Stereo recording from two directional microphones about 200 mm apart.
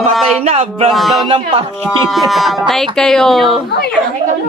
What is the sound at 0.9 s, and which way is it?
Speech, centre (ahead or behind).